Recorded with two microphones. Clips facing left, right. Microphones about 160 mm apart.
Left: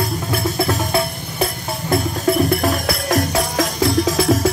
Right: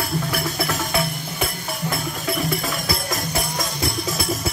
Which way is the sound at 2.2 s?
55° left (ahead or behind).